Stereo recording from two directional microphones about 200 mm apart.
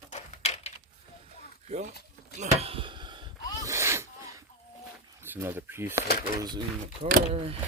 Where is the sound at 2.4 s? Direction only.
30° right (ahead or behind); by 4.1 s 15° right (ahead or behind).